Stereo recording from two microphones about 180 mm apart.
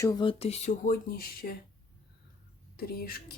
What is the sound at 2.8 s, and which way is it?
Speech, 55° left (ahead or behind).